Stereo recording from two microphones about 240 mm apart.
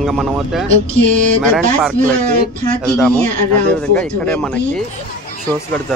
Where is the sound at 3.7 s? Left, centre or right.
Centre.